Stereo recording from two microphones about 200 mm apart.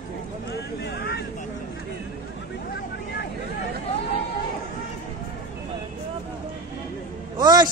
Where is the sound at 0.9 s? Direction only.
55° left (ahead or behind).